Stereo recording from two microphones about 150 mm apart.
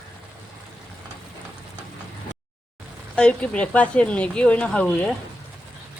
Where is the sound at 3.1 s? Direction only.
5° left (ahead or behind).